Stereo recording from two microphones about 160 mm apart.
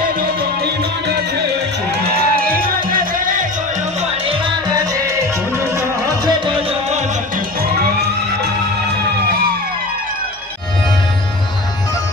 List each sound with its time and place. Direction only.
2.1 s music: 65° right (ahead or behind)
5.8 s music: 30° right (ahead or behind)